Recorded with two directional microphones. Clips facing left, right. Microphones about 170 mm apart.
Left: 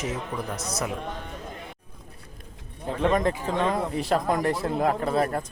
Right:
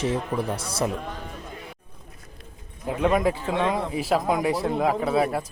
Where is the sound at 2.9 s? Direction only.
5° right (ahead or behind).